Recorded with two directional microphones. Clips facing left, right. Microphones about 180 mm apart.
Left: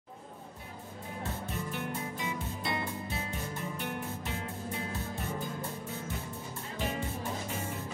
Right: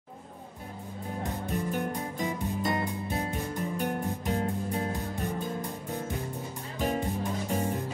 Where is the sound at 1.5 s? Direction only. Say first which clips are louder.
Right 8 dB; 45° right (ahead or behind).